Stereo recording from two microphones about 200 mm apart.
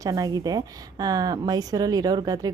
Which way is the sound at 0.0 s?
20° right (ahead or behind).